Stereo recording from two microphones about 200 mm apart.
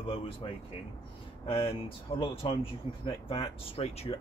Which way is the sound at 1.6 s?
25° left (ahead or behind).